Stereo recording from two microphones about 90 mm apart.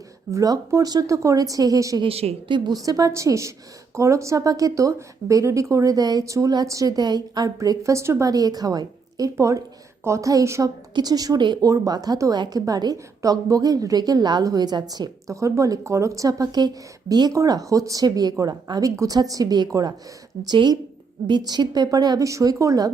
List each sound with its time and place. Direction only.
0.3 s speech: 40° right (ahead or behind)
2.0 s speech: 75° right (ahead or behind)
2.6 s speech: 40° right (ahead or behind)
8.3 s a woman's voice: 45° right (ahead or behind)
11.6 s a woman's voice: 45° right (ahead or behind)
15.3 s a woman's voice: 35° right (ahead or behind)
22.3 s speech: 35° right (ahead or behind)